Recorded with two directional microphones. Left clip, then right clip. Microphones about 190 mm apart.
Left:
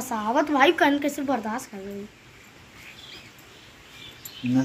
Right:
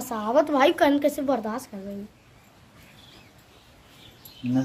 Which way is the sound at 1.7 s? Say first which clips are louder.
Left 1 dB; 60° right (ahead or behind).